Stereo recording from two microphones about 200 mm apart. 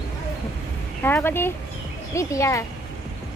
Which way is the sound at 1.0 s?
10° left (ahead or behind).